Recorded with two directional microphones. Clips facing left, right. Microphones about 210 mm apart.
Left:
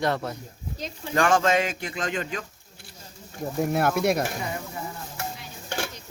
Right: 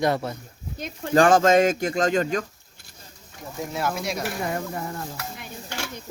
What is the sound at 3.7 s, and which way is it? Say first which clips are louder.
Speech: left 4 dB; 55° left (ahead or behind).